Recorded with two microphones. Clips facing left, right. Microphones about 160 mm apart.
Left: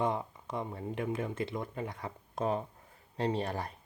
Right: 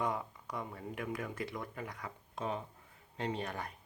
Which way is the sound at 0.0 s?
25° left (ahead or behind).